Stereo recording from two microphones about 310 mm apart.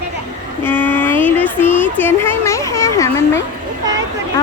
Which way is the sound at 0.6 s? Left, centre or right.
Centre.